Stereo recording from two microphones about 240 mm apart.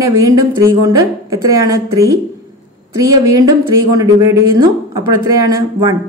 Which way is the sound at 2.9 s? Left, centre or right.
Centre.